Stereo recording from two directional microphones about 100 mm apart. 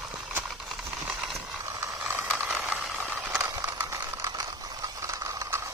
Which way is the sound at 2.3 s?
10° right (ahead or behind).